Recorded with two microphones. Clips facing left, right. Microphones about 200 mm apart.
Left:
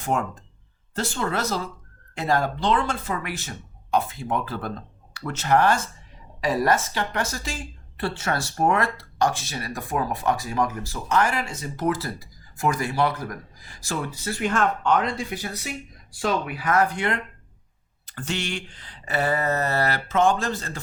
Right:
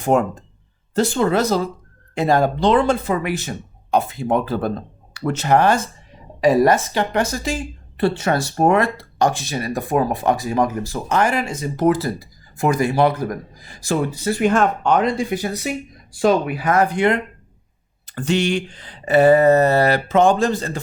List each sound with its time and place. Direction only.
0.0 s speech: 20° right (ahead or behind)